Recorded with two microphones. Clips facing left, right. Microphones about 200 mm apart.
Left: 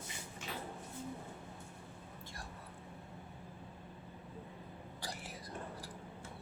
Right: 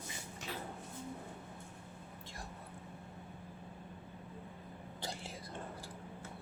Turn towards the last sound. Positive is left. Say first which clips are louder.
# right 2 dB
turn(degrees=-25)  # may be behind; listen again after turning